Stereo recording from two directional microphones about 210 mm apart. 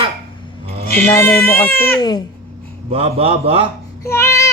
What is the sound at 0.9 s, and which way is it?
Speech, 10° left (ahead or behind).